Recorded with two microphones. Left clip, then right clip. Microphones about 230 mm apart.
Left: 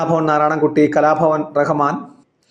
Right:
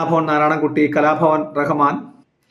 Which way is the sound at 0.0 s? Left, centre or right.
Centre.